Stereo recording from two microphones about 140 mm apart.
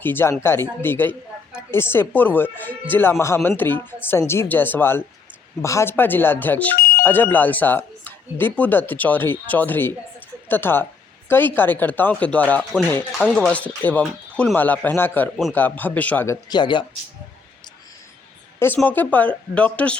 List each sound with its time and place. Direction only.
0.0 s speech: 15° left (ahead or behind)
6.7 s alarm: 90° left
7.0 s speech: 15° left (ahead or behind)
13.1 s speech: centre (ahead or behind)
14.5 s speech: 15° left (ahead or behind)
16.6 s speech: 35° left (ahead or behind)
18.8 s speech: 10° left (ahead or behind)